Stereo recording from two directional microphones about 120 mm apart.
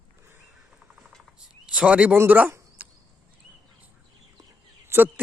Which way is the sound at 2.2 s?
15° right (ahead or behind).